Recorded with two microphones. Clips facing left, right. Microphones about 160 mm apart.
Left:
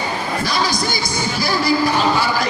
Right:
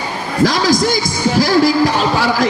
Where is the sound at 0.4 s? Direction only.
90° right.